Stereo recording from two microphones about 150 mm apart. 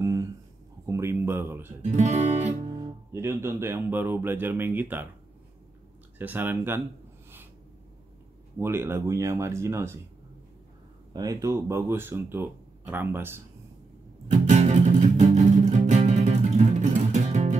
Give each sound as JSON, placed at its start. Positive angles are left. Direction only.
{"t": 0.0, "sound": "a sound", "side_deg": -20}
{"t": 1.8, "sound": "speech", "side_deg": -50}
{"t": 2.8, "sound": "speech", "side_deg": -20}
{"t": 6.1, "sound": "speech", "side_deg": -15}
{"t": 8.5, "sound": "speech", "side_deg": -15}
{"t": 11.1, "sound": "speech", "side_deg": -20}
{"t": 14.3, "sound": "music", "side_deg": -50}